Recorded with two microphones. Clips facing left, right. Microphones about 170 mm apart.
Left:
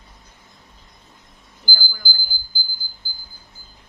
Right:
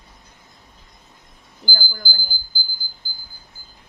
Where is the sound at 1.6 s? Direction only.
50° right (ahead or behind).